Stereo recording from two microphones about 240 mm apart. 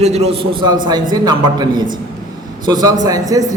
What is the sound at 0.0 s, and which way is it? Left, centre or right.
A man's voice, right.